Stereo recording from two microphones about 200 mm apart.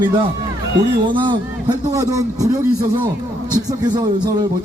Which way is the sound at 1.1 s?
25° right (ahead or behind).